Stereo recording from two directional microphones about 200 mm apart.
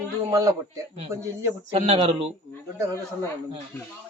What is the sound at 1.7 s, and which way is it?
Speech, 30° right (ahead or behind).